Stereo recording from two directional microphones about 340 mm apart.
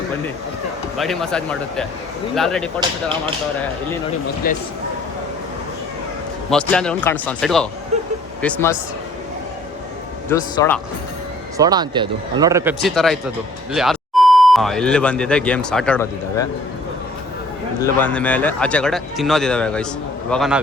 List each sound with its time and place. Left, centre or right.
0.9 s speech: centre
4.4 s speech: left
6.5 s speech: centre
10.2 s speech: centre
11.5 s speech: centre
18.0 s speech: centre